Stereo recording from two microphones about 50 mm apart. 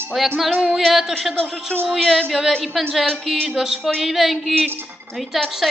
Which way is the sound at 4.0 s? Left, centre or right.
Centre.